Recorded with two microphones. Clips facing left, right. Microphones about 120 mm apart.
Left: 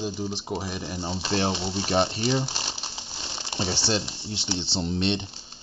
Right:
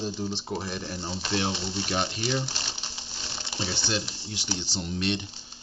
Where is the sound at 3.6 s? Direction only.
35° left (ahead or behind).